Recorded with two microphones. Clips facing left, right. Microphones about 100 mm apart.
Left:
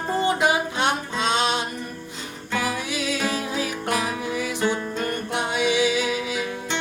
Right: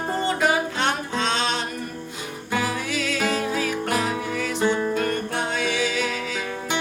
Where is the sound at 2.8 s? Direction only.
15° left (ahead or behind).